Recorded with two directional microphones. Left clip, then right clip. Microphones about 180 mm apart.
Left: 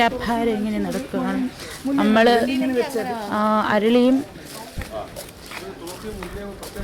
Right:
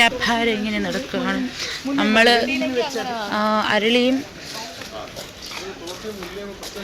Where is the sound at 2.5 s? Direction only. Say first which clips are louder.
Even; 65° left (ahead or behind).